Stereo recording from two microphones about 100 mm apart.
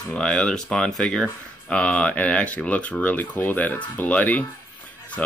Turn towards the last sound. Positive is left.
turn(degrees=10)  # may be behind; listen again after turning